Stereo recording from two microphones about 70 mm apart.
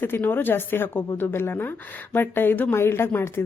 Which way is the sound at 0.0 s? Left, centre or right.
Left.